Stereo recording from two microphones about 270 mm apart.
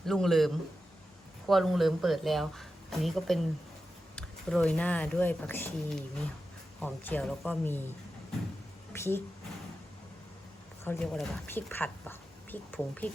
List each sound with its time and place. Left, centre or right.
0.0 s speech: centre
8.9 s a woman's voice: centre
10.8 s speech: centre